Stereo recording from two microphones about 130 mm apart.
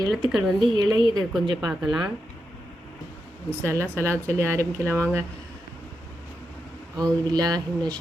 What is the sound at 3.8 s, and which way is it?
Speech, 15° left (ahead or behind).